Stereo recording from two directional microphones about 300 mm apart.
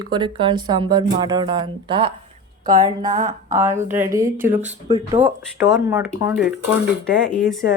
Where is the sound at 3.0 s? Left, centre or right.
Right.